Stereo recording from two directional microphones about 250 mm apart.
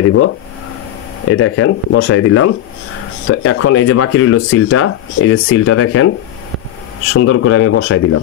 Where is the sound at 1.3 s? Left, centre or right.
Left.